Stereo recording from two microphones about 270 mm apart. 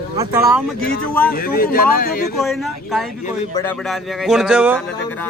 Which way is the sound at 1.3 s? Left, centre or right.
Left.